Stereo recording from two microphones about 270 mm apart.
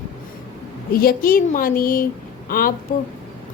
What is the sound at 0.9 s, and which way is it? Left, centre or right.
A woman's voice, left.